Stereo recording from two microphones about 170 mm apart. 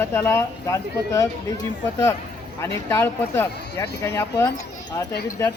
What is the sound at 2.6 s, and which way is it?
Speech, 15° left (ahead or behind).